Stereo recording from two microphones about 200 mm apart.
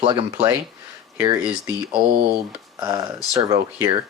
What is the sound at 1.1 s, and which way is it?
Speech, 15° right (ahead or behind).